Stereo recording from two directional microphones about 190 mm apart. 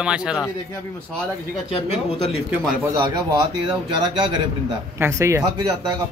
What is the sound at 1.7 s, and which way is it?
Speech, 30° left (ahead or behind).